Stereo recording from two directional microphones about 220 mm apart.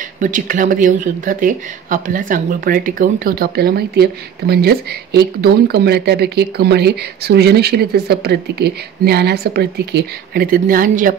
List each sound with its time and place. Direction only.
0.2 s speech: 35° right (ahead or behind)